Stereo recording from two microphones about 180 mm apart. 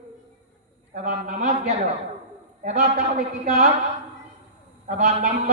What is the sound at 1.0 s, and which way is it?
Speech, 45° right (ahead or behind).